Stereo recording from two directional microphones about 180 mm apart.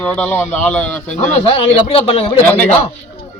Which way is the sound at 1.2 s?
30° left (ahead or behind).